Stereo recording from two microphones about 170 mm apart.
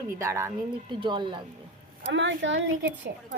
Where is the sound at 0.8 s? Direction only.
25° right (ahead or behind).